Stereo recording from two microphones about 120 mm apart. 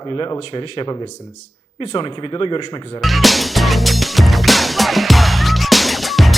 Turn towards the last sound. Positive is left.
turn(degrees=0)  # may be behind; listen again after turning